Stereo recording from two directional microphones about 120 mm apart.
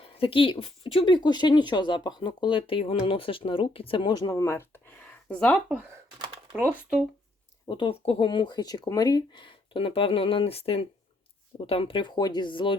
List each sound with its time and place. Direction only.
0.0 s speech: 50° left (ahead or behind); by 5.5 s 15° left (ahead or behind)
7.7 s speech: 45° left (ahead or behind)